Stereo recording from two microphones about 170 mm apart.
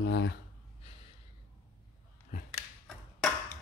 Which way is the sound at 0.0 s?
90° left.